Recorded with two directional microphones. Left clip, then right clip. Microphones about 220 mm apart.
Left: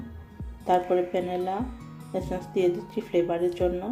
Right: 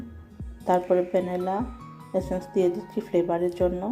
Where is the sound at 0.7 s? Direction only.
20° right (ahead or behind).